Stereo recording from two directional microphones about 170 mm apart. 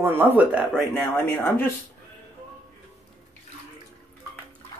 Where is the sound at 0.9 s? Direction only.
10° left (ahead or behind).